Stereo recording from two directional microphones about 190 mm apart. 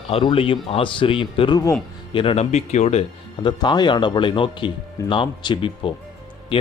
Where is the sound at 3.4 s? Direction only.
25° left (ahead or behind).